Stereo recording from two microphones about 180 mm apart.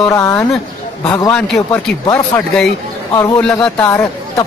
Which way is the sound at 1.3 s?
5° left (ahead or behind).